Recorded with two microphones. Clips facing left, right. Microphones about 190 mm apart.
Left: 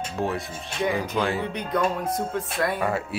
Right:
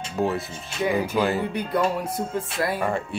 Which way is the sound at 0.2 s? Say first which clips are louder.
Right 4 dB; centre (ahead or behind).